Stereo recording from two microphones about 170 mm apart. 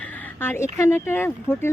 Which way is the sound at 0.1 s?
10° left (ahead or behind).